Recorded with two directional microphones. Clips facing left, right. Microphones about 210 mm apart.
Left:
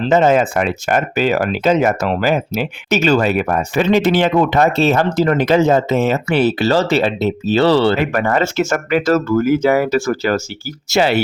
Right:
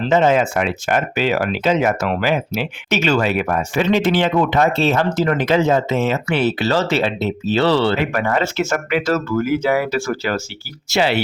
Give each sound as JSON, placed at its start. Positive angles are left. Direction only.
{"t": 0.1, "sound": "speech", "side_deg": 45}